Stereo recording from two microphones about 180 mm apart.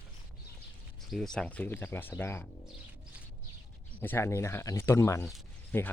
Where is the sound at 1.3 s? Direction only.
5° left (ahead or behind).